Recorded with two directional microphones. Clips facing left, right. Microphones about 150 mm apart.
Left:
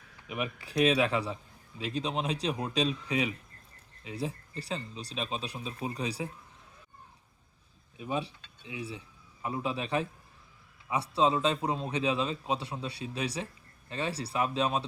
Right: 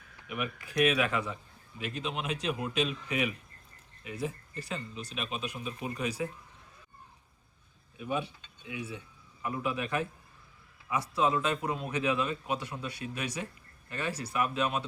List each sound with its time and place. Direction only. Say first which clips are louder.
0.3 s a man's voice: left 1 dB; 30° left (ahead or behind)
8.0 s a man's voice: even; 30° left (ahead or behind)